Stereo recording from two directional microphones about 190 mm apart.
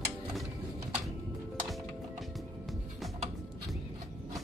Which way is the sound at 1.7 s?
Centre (ahead or behind).